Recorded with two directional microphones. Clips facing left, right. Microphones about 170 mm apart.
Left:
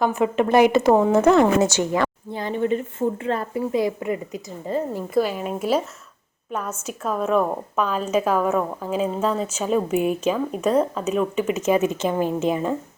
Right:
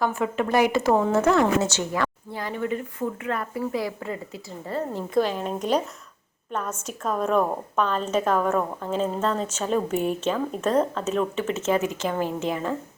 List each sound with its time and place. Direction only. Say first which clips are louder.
0.0 s a woman's voice: left 5 dB; 20° left (ahead or behind)
5.1 s a woman's voice: left 1 dB; 5° left (ahead or behind)